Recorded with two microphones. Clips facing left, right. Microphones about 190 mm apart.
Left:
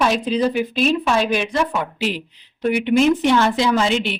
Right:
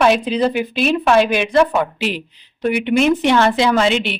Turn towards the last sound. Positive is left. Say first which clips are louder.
# right 2 dB
turn(degrees=-70)  # may be behind; listen again after turning